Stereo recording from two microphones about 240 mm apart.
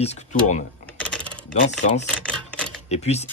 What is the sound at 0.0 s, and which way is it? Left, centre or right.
Speech, left.